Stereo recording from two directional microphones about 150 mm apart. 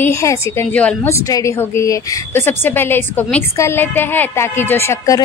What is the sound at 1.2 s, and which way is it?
A woman's voice, 20° left (ahead or behind).